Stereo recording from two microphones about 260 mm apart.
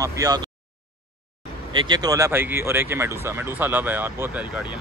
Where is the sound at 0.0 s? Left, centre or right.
Centre.